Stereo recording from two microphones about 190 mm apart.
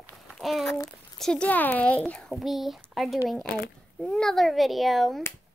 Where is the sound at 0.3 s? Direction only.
Centre (ahead or behind).